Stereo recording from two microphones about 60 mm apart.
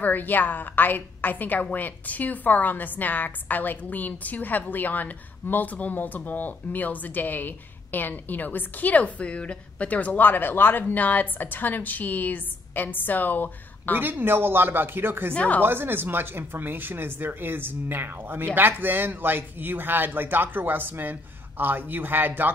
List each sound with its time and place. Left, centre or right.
0.0 s a woman's voice: left
13.9 s speech: right
15.3 s a woman's voice: left
15.6 s speech: right